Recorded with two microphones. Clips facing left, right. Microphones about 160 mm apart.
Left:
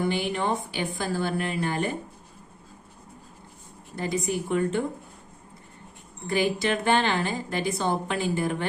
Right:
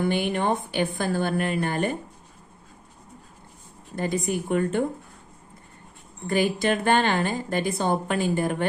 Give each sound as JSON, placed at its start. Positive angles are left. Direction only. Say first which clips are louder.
{"t": 0.1, "sound": "speech", "louder": "right 3 dB", "side_deg": -55}
{"t": 3.9, "sound": "speech", "louder": "right 2 dB", "side_deg": -50}
{"t": 6.2, "sound": "speech", "louder": "right 2 dB", "side_deg": -50}